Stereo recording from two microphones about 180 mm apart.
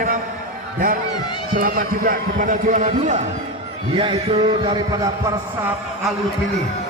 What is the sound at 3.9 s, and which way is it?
A man's voice, 30° right (ahead or behind).